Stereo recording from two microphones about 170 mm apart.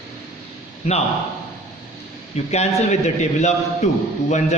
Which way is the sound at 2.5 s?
40° left (ahead or behind).